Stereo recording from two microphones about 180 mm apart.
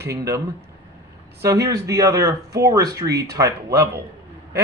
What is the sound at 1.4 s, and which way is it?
Speech, 15° right (ahead or behind).